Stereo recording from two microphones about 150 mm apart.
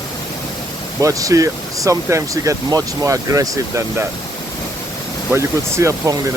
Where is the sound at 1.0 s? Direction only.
20° right (ahead or behind).